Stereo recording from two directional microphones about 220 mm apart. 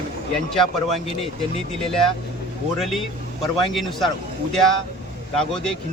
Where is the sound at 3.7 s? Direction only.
Centre (ahead or behind).